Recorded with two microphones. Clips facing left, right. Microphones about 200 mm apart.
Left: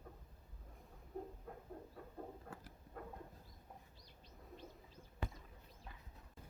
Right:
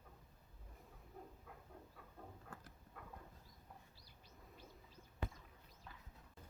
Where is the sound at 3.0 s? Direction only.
45° left (ahead or behind).